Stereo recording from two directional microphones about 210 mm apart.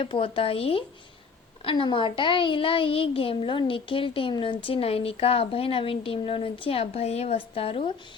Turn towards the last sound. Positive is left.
turn(degrees=25)  # may be behind; listen again after turning